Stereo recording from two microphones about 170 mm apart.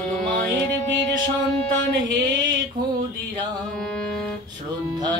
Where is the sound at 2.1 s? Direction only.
25° right (ahead or behind).